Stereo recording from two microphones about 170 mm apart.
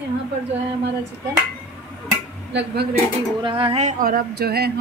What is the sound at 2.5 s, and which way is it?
Speech, 90° right.